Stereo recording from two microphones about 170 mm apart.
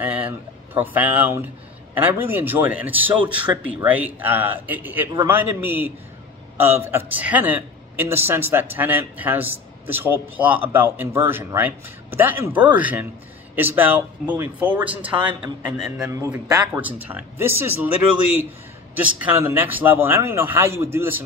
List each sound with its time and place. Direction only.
0.0 s a sound: 10° right (ahead or behind)
0.7 s a man's voice: 10° right (ahead or behind)
16.1 s a man's voice: 20° right (ahead or behind)
18.9 s a man's voice: 10° right (ahead or behind)